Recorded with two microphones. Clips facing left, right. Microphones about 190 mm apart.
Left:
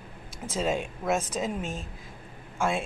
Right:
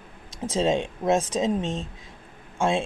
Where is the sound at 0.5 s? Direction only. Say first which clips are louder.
Right 5 dB; 30° right (ahead or behind).